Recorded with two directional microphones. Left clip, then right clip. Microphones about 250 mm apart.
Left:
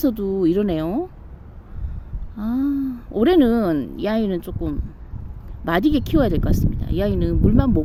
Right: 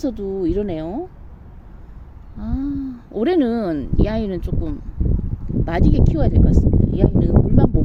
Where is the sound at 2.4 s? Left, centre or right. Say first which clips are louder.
Left 3 dB; centre.